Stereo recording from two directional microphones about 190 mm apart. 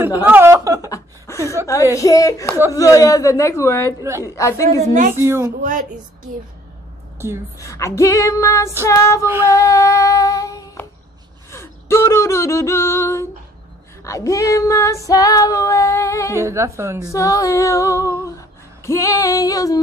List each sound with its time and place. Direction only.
0.2 s a woman's voice: 10° right (ahead or behind)
0.8 s chuckle: 15° left (ahead or behind)
1.4 s a woman's voice: 15° right (ahead or behind)
2.0 s female singing: 20° left (ahead or behind)
5.1 s a woman's voice: 15° right (ahead or behind)
5.6 s a woman's voice: 40° right (ahead or behind)
7.5 s female singing: 15° left (ahead or behind)
9.2 s a woman's voice: 15° right (ahead or behind)
9.5 s female singing: 15° left (ahead or behind)
11.5 s a sound: 15° left (ahead or behind)
14.0 s female singing: 15° left (ahead or behind)
16.3 s a woman's voice: 15° right (ahead or behind)
17.1 s female singing: 15° left (ahead or behind)